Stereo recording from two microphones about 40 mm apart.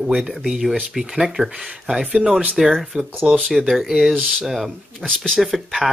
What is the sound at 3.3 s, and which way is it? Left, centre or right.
Speech, right.